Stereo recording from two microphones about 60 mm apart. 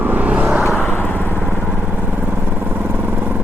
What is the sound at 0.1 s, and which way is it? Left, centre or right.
Vehicle, right.